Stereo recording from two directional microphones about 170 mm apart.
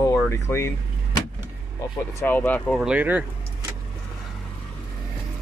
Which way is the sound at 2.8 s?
10° right (ahead or behind).